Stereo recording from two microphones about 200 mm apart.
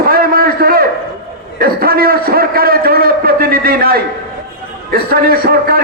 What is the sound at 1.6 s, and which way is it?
A man's voice, 50° right (ahead or behind).